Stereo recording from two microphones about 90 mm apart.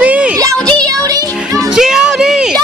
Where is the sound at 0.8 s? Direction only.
40° right (ahead or behind).